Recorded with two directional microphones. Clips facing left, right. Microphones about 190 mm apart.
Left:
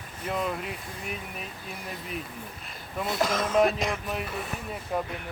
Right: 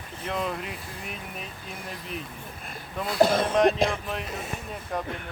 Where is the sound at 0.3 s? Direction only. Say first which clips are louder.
Even; centre (ahead or behind).